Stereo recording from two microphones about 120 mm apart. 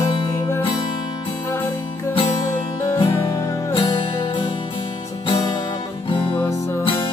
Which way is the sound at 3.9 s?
50° left (ahead or behind).